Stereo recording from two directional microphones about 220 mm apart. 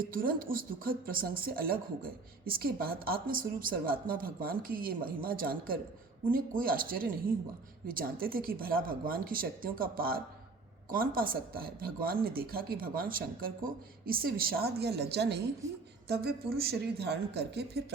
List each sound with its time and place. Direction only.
0.0 s speech: 40° right (ahead or behind)